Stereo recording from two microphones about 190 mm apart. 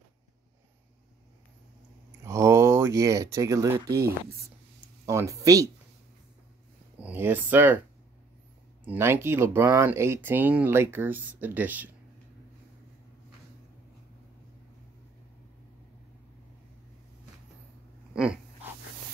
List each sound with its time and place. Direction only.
2.2 s speech: 15° right (ahead or behind)
7.0 s speech: 10° right (ahead or behind)
8.8 s speech: 10° right (ahead or behind)
18.1 s dog: 5° right (ahead or behind)